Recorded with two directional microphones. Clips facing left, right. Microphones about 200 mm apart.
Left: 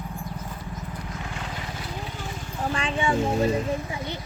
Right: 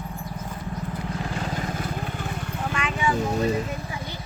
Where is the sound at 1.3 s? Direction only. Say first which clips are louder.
Right 6 dB; 40° right (ahead or behind); by 2.6 s 60° right (ahead or behind).